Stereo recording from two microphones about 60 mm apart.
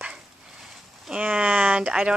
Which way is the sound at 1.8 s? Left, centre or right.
Centre.